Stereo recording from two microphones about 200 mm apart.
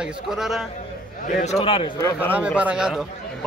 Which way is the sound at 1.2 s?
35° left (ahead or behind).